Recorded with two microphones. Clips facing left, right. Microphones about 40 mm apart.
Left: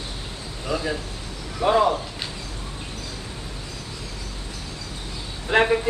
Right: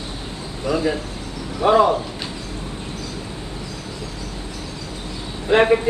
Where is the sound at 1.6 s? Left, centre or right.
Right.